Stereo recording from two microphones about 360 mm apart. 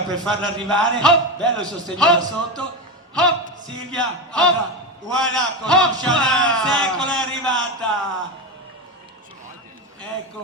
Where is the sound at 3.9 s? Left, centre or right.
Centre.